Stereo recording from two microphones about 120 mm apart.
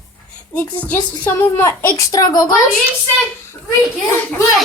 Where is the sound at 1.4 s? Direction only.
25° left (ahead or behind).